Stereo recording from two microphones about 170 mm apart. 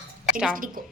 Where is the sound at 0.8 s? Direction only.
55° right (ahead or behind).